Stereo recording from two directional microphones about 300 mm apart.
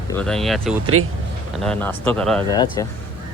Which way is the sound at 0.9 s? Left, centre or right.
Right.